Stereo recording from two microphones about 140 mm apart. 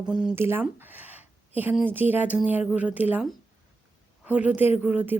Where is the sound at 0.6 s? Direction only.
15° right (ahead or behind).